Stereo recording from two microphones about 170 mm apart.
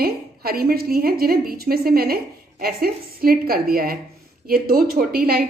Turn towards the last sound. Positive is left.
turn(degrees=-60)  # may be behind; listen again after turning